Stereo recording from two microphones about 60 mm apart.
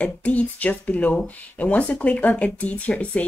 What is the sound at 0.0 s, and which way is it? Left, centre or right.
Speech, left.